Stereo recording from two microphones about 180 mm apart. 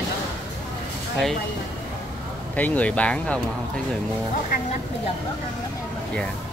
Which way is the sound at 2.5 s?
10° left (ahead or behind).